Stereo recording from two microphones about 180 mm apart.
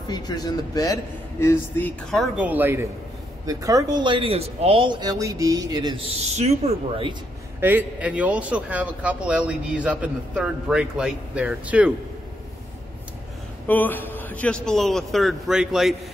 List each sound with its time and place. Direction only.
0.1 s a man's voice: 20° left (ahead or behind)
2.1 s a man's voice: 5° right (ahead or behind); by 6.0 s 25° right (ahead or behind)
6.2 s speech: 35° right (ahead or behind)
7.6 s a man's voice: 10° right (ahead or behind)
13.7 s a man's voice: 10° left (ahead or behind)